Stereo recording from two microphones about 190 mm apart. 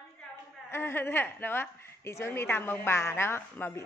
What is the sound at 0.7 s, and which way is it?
A woman's voice, 10° left (ahead or behind).